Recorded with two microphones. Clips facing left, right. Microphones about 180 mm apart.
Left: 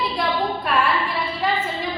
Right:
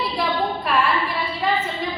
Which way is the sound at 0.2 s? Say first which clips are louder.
Right 1 dB; centre (ahead or behind).